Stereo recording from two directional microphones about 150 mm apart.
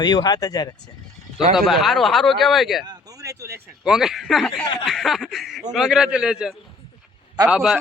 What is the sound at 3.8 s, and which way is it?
Speech, 5° right (ahead or behind).